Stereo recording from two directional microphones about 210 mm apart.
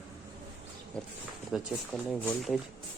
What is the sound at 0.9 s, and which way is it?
Speech, 5° left (ahead or behind).